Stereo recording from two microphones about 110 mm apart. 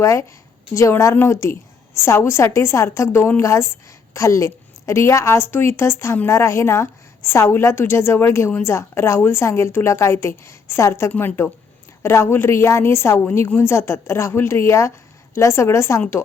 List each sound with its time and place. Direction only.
0.0 s a woman's voice: 30° left (ahead or behind)